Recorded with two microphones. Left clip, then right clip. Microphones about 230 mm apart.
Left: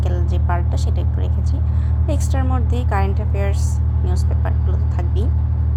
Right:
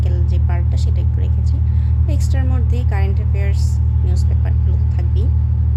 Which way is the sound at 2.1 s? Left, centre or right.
Centre.